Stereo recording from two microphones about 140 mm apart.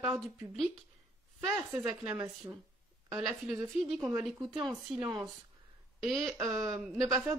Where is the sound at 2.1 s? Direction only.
15° right (ahead or behind).